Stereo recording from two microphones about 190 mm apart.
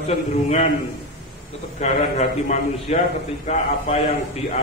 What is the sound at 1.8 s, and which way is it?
Speech, 35° left (ahead or behind).